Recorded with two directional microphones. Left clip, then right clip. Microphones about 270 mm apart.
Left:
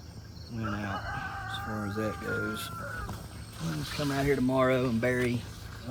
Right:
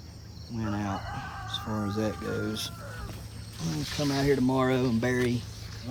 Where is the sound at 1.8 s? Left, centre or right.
Right.